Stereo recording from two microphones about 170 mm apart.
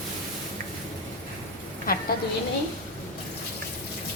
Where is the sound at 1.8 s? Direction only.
60° left (ahead or behind).